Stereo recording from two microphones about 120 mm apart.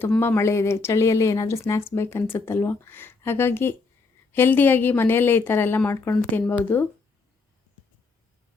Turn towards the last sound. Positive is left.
turn(degrees=15)  # may be behind; listen again after turning